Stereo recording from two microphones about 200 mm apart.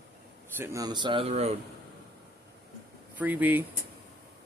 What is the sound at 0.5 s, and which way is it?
Speech, 15° right (ahead or behind).